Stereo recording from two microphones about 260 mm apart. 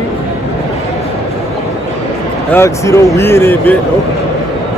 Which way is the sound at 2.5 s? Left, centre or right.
Centre.